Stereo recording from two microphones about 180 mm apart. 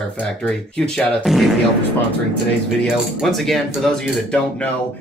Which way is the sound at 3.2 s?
Centre (ahead or behind).